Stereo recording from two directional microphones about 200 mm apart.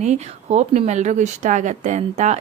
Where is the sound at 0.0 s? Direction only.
35° right (ahead or behind).